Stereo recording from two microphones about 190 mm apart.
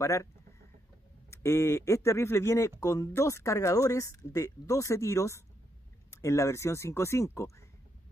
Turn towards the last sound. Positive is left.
turn(degrees=15)  # may be behind; listen again after turning